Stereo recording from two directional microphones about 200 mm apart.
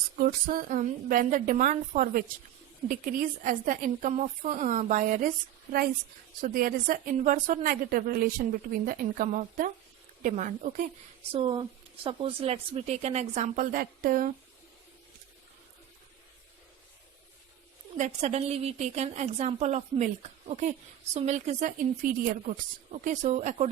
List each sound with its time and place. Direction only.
0.2 s a woman's voice: 45° right (ahead or behind)
6.4 s a woman's voice: 45° right (ahead or behind)
11.3 s a woman's voice: 25° right (ahead or behind); by 14.3 s 45° right (ahead or behind)
17.9 s a woman's voice: 35° right (ahead or behind)